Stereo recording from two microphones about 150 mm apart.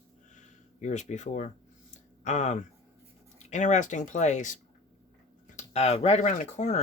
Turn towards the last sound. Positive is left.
turn(degrees=55)  # may be behind; listen again after turning